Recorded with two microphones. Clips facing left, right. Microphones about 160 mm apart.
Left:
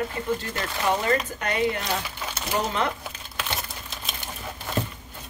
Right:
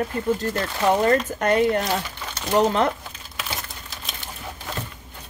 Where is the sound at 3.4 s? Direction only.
Centre (ahead or behind).